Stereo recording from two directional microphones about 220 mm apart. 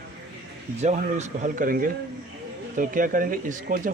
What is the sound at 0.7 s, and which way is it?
A man's voice, 30° right (ahead or behind).